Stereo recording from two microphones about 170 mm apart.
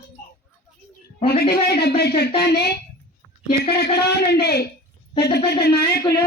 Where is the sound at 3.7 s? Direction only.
70° left (ahead or behind).